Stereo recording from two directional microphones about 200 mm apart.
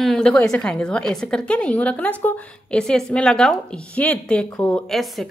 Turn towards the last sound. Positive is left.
turn(degrees=0)  # may be behind; listen again after turning